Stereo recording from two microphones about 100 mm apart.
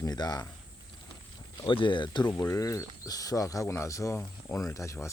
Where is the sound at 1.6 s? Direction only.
55° left (ahead or behind).